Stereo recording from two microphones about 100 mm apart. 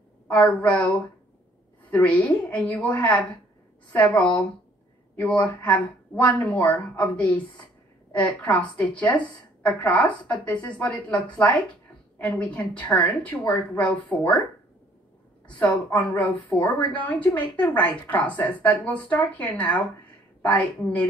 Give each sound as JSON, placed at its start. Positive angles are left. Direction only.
{"t": 0.3, "sound": "a woman's voice", "side_deg": 15}
{"t": 15.9, "sound": "a woman's voice", "side_deg": 15}